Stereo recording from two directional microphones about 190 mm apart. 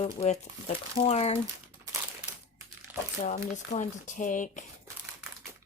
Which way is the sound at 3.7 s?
40° left (ahead or behind).